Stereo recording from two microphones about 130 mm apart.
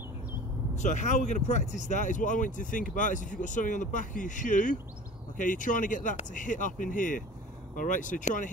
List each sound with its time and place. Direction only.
0.7 s speech: 70° left (ahead or behind)